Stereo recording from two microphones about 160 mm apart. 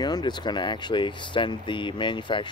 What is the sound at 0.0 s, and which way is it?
Speech, 25° left (ahead or behind).